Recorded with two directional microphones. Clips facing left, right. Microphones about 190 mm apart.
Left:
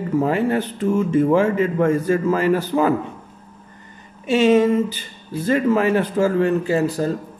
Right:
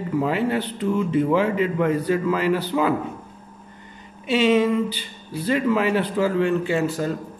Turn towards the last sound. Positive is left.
turn(degrees=35)  # may be behind; listen again after turning